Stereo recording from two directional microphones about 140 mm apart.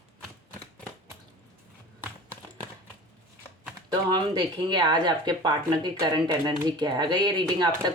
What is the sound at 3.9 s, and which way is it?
Speech, 30° right (ahead or behind).